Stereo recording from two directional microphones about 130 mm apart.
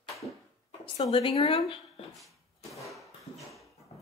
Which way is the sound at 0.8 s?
40° left (ahead or behind).